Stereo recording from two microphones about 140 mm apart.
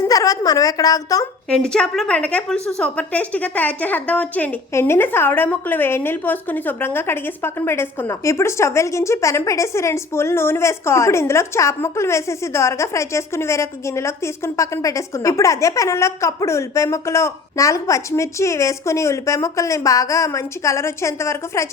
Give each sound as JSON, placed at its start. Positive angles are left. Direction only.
{"t": 0.0, "sound": "a woman's voice", "side_deg": 25}
{"t": 1.5, "sound": "a woman's voice", "side_deg": 5}